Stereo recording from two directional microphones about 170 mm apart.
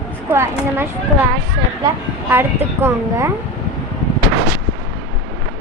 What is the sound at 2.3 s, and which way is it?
Speech, 15° right (ahead or behind).